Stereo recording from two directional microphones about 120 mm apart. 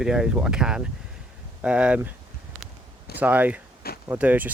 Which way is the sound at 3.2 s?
15° right (ahead or behind).